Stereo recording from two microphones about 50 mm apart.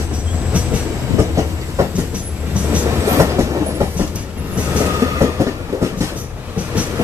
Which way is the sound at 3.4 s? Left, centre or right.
Right.